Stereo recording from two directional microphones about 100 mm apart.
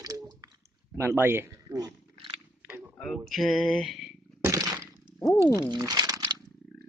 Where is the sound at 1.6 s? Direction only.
40° right (ahead or behind).